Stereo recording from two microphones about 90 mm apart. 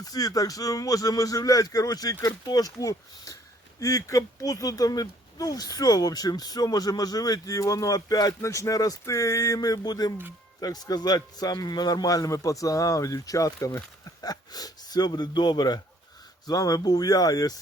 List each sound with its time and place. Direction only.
0.0 s speech: 45° left (ahead or behind)